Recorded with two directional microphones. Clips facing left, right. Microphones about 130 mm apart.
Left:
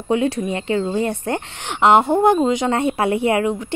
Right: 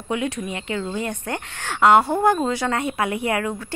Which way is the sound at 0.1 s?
30° left (ahead or behind).